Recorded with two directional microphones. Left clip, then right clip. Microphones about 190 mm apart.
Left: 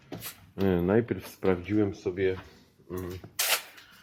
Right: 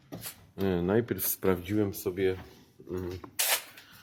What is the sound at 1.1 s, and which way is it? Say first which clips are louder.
Speech: left 1 dB; centre (ahead or behind).